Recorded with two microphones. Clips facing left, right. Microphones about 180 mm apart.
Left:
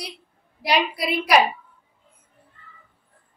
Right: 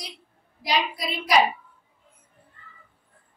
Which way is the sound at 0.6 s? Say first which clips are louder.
Left 4 dB; 65° left (ahead or behind).